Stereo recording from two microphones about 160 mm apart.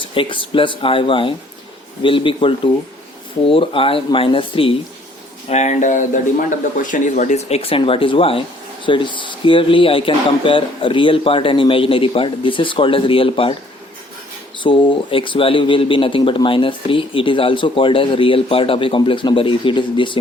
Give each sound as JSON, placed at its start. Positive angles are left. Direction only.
{"t": 0.0, "sound": "speech", "side_deg": 30}
{"t": 5.5, "sound": "speech", "side_deg": 45}
{"t": 14.6, "sound": "speech", "side_deg": 30}